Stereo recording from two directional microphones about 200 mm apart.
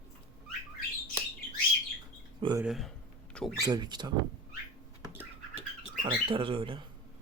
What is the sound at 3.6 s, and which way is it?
Speech, 20° right (ahead or behind).